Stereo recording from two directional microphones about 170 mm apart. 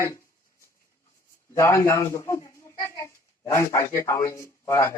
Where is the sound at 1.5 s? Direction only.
15° left (ahead or behind).